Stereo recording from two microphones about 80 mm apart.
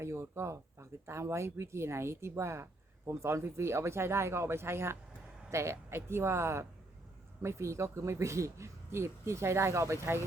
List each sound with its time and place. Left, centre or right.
0.0 s speech: right